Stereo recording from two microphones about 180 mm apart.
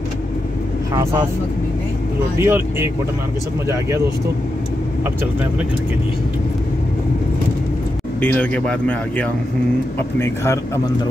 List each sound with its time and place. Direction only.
2.3 s speech: 15° right (ahead or behind)
8.2 s speech: 10° left (ahead or behind)